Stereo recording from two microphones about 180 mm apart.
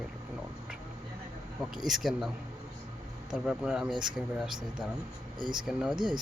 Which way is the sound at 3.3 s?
5° right (ahead or behind).